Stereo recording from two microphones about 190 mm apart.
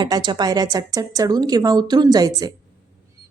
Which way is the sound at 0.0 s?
25° right (ahead or behind).